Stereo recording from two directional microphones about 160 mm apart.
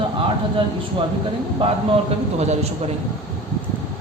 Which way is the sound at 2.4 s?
45° right (ahead or behind).